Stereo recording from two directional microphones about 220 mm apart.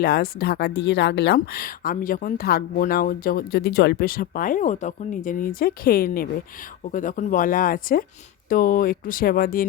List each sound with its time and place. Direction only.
0.0 s a woman's voice: 45° left (ahead or behind)